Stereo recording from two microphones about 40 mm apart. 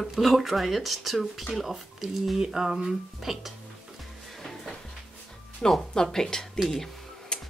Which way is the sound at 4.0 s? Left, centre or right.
Centre.